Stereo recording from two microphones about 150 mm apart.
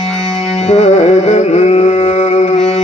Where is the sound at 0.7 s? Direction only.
45° left (ahead or behind).